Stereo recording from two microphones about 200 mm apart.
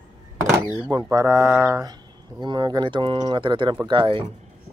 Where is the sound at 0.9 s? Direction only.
15° right (ahead or behind).